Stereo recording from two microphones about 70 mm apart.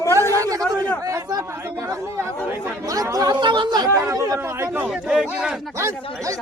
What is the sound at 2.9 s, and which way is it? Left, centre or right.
Chatter, right.